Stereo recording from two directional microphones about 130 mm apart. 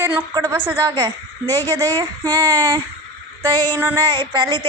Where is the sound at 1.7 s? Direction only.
30° right (ahead or behind).